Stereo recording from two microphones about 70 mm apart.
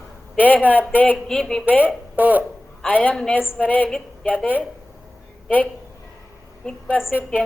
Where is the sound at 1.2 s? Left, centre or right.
Centre.